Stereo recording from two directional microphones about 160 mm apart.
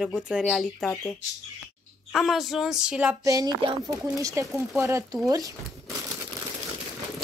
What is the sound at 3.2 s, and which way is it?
Speech, 20° right (ahead or behind).